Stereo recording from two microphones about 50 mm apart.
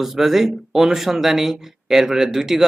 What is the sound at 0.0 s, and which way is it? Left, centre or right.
Speech, centre.